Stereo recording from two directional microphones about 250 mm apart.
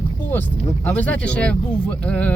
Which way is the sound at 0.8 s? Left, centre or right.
Centre.